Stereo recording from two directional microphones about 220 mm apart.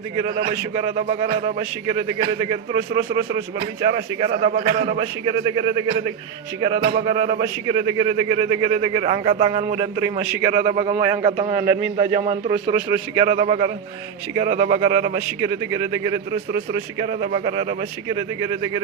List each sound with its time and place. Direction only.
0.9 s speech: 25° right (ahead or behind)
2.9 s speech: 20° right (ahead or behind)